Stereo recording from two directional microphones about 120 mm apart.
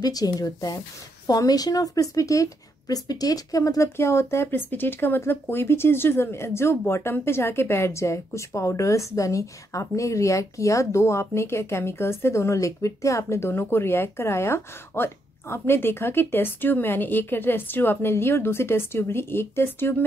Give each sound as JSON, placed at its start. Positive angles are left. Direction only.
{"t": 0.0, "sound": "a woman's voice", "side_deg": 30}